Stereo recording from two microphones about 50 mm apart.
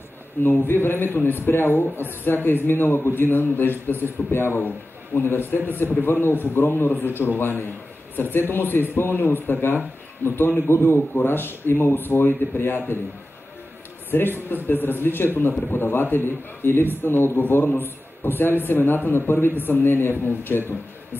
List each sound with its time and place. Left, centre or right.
0.4 s a man's voice: left
4.6 s a man's voice: left
6.2 s a man's voice: left
14.1 s a man's voice: left